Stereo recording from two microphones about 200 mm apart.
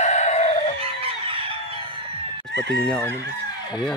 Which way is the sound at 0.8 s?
30° right (ahead or behind).